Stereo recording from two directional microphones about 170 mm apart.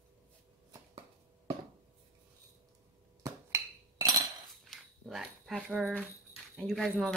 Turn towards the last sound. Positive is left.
turn(degrees=0)  # may be behind; listen again after turning